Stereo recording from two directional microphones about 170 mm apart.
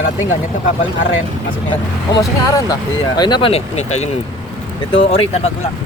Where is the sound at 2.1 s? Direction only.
20° left (ahead or behind); by 5.5 s 35° left (ahead or behind).